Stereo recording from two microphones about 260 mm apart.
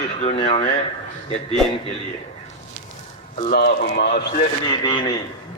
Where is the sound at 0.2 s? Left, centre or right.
Left.